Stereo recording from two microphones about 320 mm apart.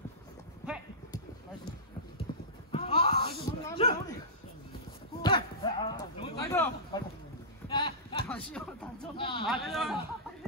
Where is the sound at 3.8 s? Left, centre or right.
Centre.